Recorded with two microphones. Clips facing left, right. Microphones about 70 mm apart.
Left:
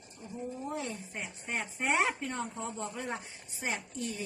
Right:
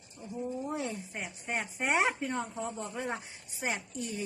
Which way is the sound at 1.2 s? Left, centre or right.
Right.